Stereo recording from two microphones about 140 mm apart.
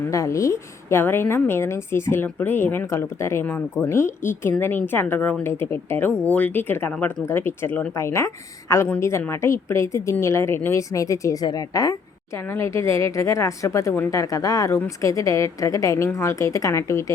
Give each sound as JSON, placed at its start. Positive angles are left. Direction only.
{"t": 0.1, "sound": "a woman's voice", "side_deg": 20}